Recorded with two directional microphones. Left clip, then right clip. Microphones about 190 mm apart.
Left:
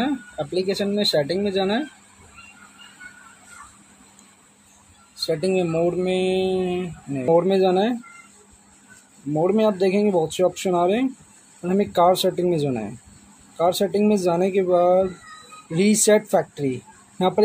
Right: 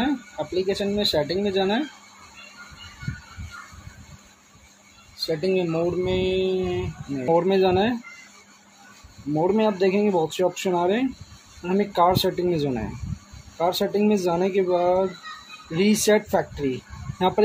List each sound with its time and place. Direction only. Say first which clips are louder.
0.6 s speech: left 1 dB; 20° left (ahead or behind)
5.1 s speech: left 2 dB; 25° left (ahead or behind)
9.3 s speech: left 2 dB; 20° left (ahead or behind)